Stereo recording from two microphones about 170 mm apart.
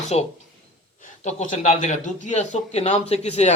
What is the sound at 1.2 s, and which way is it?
A man's voice, 45° left (ahead or behind).